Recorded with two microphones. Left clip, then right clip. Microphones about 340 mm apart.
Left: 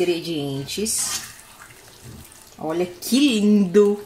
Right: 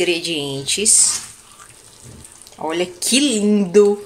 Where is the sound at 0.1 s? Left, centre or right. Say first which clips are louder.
Right 4 dB; right.